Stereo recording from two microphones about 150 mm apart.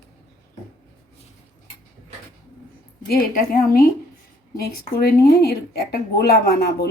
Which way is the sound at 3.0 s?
75° left (ahead or behind).